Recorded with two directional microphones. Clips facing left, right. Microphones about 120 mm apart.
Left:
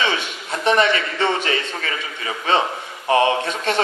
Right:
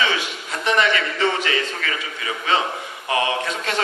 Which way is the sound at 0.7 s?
30° left (ahead or behind).